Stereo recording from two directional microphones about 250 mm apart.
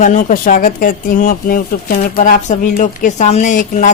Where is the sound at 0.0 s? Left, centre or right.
Left.